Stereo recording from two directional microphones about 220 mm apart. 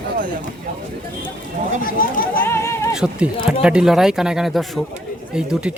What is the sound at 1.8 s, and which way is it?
Speech, 40° left (ahead or behind).